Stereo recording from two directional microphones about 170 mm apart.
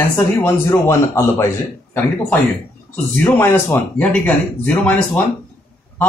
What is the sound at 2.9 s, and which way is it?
A man's voice, 10° left (ahead or behind).